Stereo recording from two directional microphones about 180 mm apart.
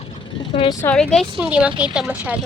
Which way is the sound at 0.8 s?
10° left (ahead or behind).